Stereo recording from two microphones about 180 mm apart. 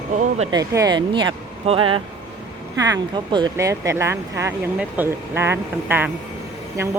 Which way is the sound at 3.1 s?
25° right (ahead or behind).